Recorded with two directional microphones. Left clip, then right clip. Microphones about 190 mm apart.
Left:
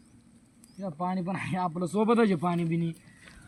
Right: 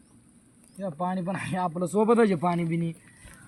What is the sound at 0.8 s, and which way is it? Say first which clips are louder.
Speech: right 2 dB; 20° right (ahead or behind).